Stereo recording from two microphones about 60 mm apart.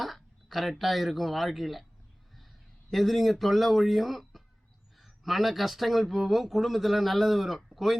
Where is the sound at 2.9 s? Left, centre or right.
Centre.